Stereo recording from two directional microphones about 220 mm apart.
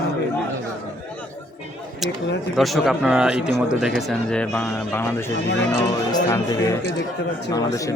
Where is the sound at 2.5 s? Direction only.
Centre (ahead or behind).